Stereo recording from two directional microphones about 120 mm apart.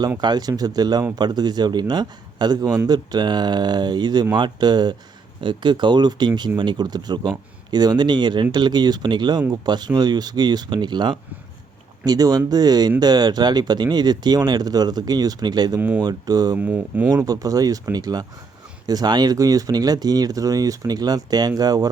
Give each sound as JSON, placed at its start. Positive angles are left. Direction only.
{"t": 0.2, "sound": "a man's voice", "side_deg": -35}
{"t": 16.6, "sound": "speech", "side_deg": -15}
{"t": 17.2, "sound": "a man's voice", "side_deg": -30}